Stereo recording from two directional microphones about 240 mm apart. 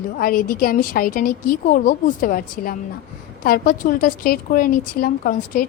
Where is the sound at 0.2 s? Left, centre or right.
Left.